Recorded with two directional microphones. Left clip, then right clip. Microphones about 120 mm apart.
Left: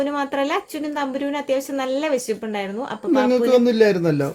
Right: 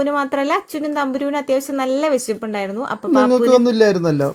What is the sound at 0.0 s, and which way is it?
Speech, 40° right (ahead or behind).